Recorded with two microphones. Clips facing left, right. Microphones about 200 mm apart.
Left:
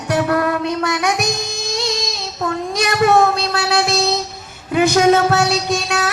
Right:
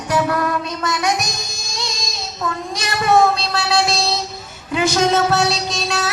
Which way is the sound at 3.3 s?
55° left (ahead or behind).